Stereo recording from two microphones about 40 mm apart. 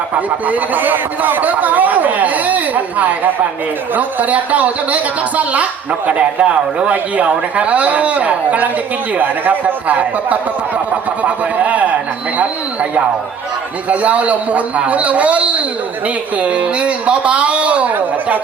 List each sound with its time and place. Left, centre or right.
0.4 s a man's voice: right
6.1 s a man's voice: right
13.9 s a man's voice: right